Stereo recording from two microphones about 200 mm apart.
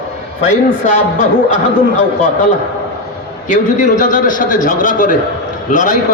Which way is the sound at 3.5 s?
40° left (ahead or behind).